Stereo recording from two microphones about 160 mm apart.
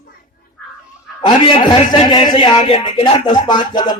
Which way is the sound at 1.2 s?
30° left (ahead or behind).